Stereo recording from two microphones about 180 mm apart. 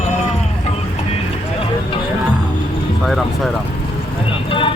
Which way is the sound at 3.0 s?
Centre (ahead or behind).